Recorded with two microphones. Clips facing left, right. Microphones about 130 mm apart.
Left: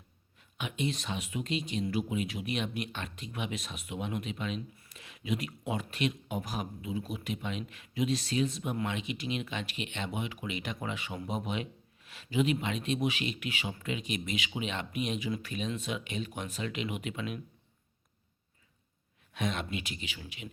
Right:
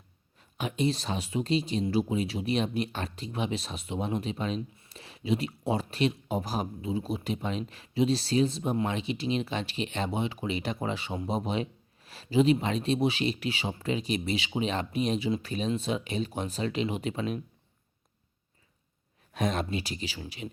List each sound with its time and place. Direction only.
0.6 s speech: 35° right (ahead or behind)
19.3 s speech: 40° right (ahead or behind)